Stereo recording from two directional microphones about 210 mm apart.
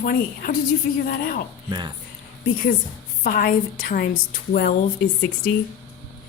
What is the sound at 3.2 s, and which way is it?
A woman's voice, 40° left (ahead or behind).